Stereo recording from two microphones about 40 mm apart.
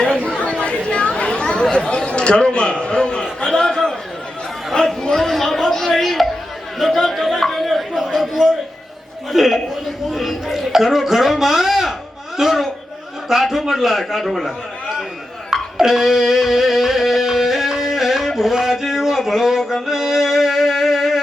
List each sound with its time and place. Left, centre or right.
0.6 s chatter: left
1.7 s a man's voice: left
3.4 s a sound: centre
4.7 s chatter: centre
5.1 s chatter: centre
6.7 s speech: centre
7.1 s a sound: centre
9.3 s a man's voice: centre
15.4 s music: centre